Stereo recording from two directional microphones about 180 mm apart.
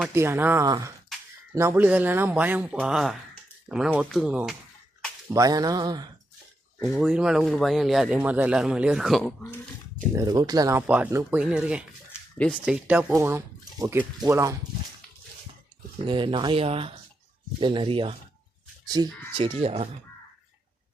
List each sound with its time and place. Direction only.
0.1 s speech: 15° right (ahead or behind)
5.3 s speech: 20° right (ahead or behind)
6.9 s speech: 5° right (ahead or behind)
10.1 s speech: 20° right (ahead or behind)
10.8 s speech: 5° right (ahead or behind)
16.0 s speech: 25° right (ahead or behind)